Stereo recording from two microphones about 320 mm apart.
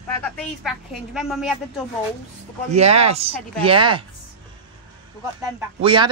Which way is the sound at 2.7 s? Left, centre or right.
Centre.